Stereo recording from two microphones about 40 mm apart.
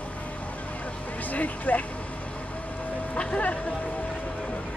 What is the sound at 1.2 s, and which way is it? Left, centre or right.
Speech, left.